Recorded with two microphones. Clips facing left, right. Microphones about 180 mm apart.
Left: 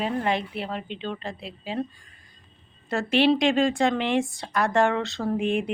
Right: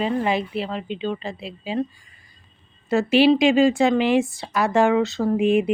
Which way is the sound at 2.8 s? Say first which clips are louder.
Right 5 dB; 5° right (ahead or behind).